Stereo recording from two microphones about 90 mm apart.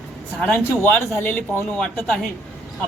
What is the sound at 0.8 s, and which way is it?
Speech, 25° left (ahead or behind).